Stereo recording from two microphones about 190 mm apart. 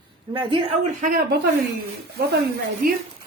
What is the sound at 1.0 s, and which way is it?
Speech, 45° right (ahead or behind).